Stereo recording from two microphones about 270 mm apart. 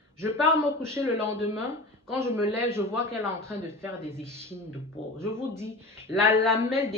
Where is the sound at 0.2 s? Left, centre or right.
Centre.